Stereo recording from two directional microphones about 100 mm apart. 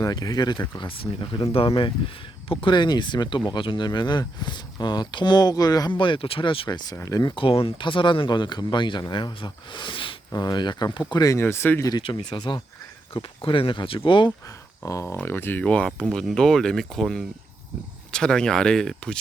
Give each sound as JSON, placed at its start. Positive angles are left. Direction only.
{"t": 0.0, "sound": "speech", "side_deg": 40}
{"t": 0.8, "sound": "speech", "side_deg": 60}
{"t": 5.9, "sound": "speech", "side_deg": 55}
{"t": 6.7, "sound": "speech", "side_deg": 40}
{"t": 6.9, "sound": "speech", "side_deg": 30}
{"t": 7.2, "sound": "speech", "side_deg": 55}
{"t": 11.1, "sound": "speech", "side_deg": 35}
{"t": 12.0, "sound": "speech", "side_deg": 50}
{"t": 14.4, "sound": "speech", "side_deg": 35}